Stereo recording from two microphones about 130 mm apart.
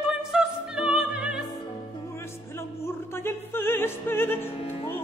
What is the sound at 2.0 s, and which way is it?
Music, 20° left (ahead or behind).